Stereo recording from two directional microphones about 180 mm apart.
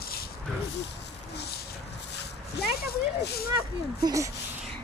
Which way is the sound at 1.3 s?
65° left (ahead or behind).